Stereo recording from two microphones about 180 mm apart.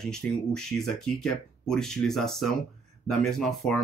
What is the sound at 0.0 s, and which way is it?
Speech, 5° left (ahead or behind).